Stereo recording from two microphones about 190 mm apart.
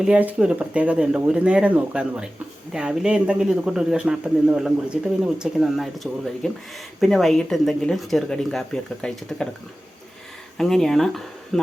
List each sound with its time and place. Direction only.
0.0 s speech: 5° right (ahead or behind)
10.6 s speech: centre (ahead or behind)